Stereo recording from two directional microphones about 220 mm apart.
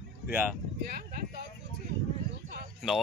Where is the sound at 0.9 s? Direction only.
40° right (ahead or behind).